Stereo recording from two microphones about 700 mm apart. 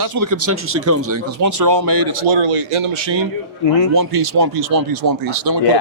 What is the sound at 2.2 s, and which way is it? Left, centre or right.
Speech, right.